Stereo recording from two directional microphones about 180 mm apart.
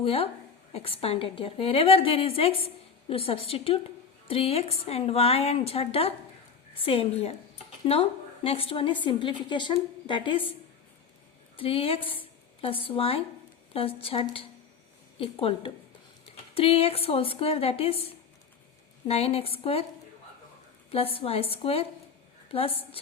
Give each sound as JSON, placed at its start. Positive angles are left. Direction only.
{"t": 0.0, "sound": "a woman's voice", "side_deg": 35}
{"t": 8.4, "sound": "a woman's voice", "side_deg": 30}
{"t": 11.5, "sound": "a woman's voice", "side_deg": 30}
{"t": 20.9, "sound": "a woman's voice", "side_deg": 35}